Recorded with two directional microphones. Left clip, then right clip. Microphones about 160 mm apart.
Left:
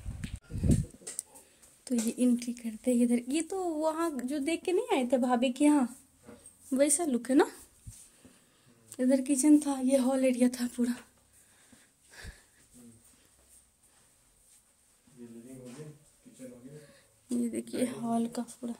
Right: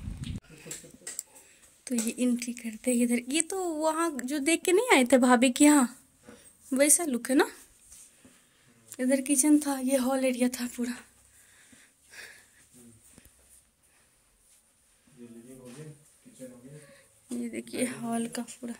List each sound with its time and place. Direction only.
1.1 s speech: 20° left (ahead or behind); by 4.5 s 10° right (ahead or behind)
4.5 s speech: 25° right (ahead or behind)
6.7 s a woman's voice: centre (ahead or behind)
8.9 s speech: 15° left (ahead or behind)
12.1 s sniff: 20° left (ahead or behind)
16.8 s a sound: 30° left (ahead or behind)
17.7 s speech: 15° left (ahead or behind)